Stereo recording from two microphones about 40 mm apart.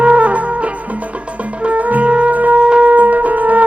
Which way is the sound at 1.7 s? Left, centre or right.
Right.